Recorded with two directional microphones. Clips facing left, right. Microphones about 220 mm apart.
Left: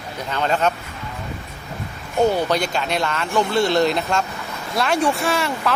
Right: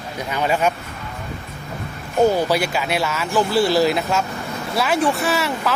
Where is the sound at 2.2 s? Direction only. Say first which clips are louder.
Right 2 dB; 5° right (ahead or behind).